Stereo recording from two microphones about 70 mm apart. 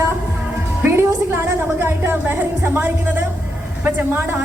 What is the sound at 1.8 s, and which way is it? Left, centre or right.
A woman's voice, right.